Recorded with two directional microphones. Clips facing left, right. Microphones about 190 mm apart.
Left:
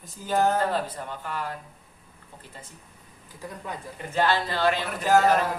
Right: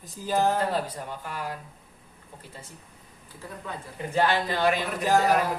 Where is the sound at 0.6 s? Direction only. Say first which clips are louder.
Left 1 dB; 10° right (ahead or behind).